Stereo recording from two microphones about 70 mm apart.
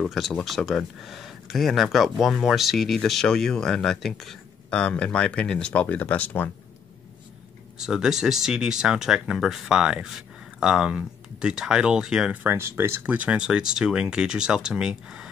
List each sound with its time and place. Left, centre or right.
0.0 s speech: centre
4.6 s speech: centre
7.8 s speech: centre
12.4 s speech: right
13.0 s speech: centre